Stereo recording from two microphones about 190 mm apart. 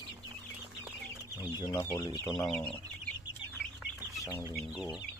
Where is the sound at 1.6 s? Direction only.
15° left (ahead or behind).